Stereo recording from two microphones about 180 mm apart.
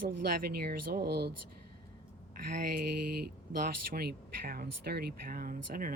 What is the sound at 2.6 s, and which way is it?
Speech, 60° right (ahead or behind).